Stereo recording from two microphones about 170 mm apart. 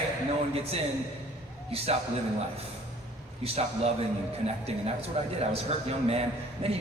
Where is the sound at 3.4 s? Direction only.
35° right (ahead or behind).